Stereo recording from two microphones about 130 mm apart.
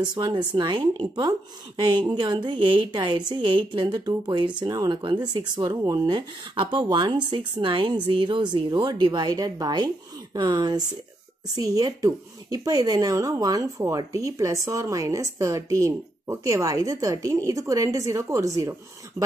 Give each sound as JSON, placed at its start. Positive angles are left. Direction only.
{"t": 0.1, "sound": "a woman's voice", "side_deg": -35}